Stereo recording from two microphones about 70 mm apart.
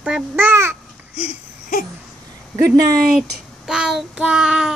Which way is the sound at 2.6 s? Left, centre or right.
Right.